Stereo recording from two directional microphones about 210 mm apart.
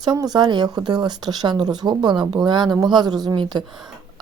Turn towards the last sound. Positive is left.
turn(degrees=-20)  # may be behind; listen again after turning